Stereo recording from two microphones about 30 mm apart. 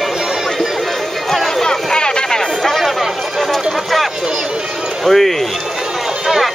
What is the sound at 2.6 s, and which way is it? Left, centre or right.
Chatter, centre.